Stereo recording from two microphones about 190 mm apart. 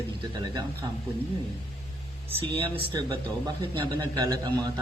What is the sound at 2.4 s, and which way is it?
A man's voice, 30° right (ahead or behind).